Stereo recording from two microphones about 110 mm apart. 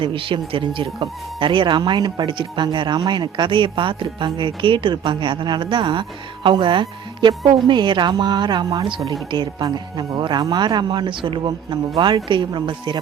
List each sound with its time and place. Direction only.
0.0 s speech: 50° right (ahead or behind)